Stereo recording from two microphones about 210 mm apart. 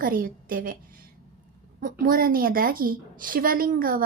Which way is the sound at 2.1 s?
45° right (ahead or behind).